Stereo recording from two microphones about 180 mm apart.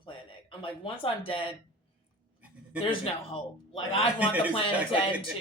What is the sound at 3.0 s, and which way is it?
A man's voice, 30° left (ahead or behind).